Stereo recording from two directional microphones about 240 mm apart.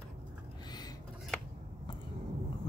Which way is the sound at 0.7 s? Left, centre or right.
Centre.